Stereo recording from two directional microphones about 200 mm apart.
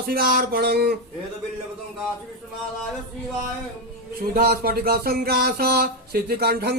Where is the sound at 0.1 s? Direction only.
45° right (ahead or behind).